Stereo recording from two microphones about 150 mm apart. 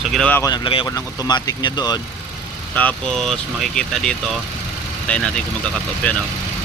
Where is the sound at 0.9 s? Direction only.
25° left (ahead or behind).